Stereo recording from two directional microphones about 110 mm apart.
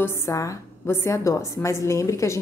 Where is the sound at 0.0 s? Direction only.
25° left (ahead or behind).